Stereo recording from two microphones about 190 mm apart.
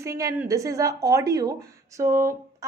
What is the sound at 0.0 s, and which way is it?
A woman's voice, 15° right (ahead or behind).